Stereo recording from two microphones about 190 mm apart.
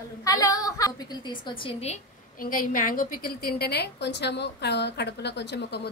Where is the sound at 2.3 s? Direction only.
45° left (ahead or behind).